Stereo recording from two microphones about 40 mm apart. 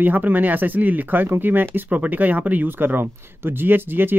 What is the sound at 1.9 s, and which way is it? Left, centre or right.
Speech, right.